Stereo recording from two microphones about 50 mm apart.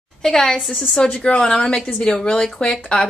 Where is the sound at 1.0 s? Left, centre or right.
Left.